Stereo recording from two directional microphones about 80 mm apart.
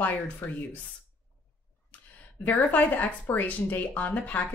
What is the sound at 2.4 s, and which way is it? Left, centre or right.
Speech, left.